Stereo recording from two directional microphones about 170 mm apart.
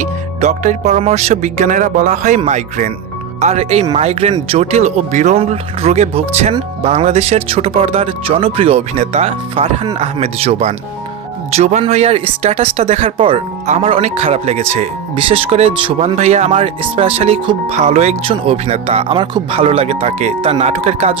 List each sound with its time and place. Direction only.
0.0 s speech: 45° right (ahead or behind)